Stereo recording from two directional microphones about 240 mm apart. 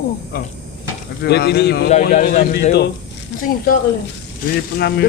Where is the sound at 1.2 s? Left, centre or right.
Left.